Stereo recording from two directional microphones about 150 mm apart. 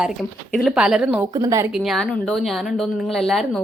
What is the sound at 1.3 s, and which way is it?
Speech, 25° right (ahead or behind).